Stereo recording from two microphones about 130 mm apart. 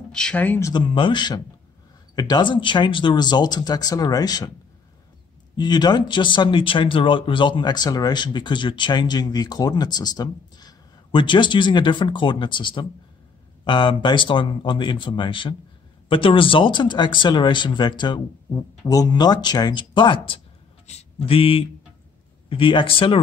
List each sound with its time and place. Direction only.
0.1 s speech: 5° left (ahead or behind)
0.7 s speech: 35° left (ahead or behind)
5.6 s speech: 35° left (ahead or behind)
20.8 s speech: 50° left (ahead or behind)